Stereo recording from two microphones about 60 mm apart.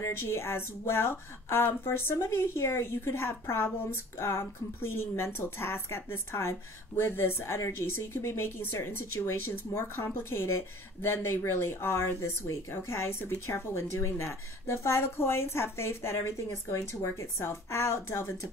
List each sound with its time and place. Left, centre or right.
0.0 s a woman's voice: left
12.2 s a woman's voice: left